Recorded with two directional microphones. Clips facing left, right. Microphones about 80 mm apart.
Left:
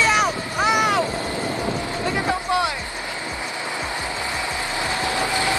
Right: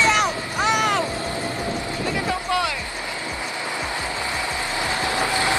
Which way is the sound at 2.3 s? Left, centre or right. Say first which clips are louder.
Left 2 dB; left.